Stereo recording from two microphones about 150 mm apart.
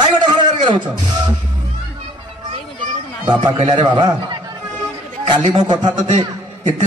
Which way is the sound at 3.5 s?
40° right (ahead or behind).